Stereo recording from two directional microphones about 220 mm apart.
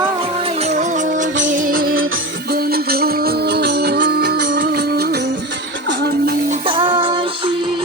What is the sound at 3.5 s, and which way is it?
Music, 45° right (ahead or behind).